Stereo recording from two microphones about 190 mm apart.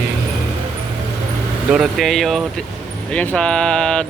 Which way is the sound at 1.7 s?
Centre (ahead or behind).